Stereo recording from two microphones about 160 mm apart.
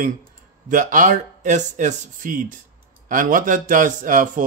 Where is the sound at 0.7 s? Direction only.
55° right (ahead or behind).